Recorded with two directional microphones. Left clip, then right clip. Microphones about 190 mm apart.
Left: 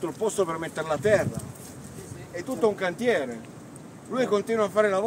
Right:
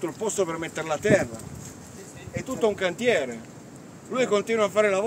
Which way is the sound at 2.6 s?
40° right (ahead or behind).